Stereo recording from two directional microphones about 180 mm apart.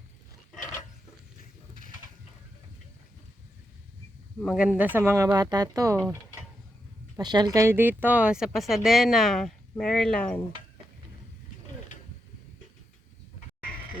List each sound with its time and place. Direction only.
4.4 s speech: 5° right (ahead or behind)
7.2 s speech: 25° right (ahead or behind); by 10.4 s 5° left (ahead or behind)